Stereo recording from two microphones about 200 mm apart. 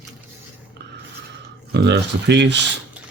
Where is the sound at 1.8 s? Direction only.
60° right (ahead or behind).